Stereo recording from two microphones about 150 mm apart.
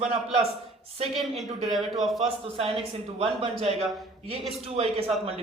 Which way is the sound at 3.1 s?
40° right (ahead or behind).